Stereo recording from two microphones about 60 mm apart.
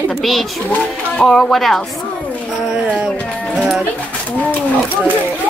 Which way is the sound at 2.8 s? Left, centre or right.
Centre.